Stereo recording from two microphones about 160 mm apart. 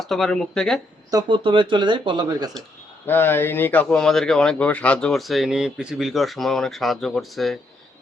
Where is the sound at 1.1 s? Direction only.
25° right (ahead or behind).